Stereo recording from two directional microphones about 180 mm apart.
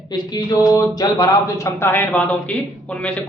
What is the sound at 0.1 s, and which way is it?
A woman's voice, 20° left (ahead or behind).